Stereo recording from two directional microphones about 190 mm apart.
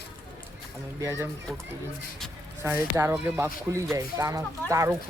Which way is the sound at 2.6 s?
10° right (ahead or behind).